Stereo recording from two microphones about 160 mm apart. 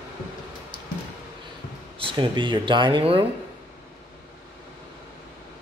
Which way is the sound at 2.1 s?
30° right (ahead or behind).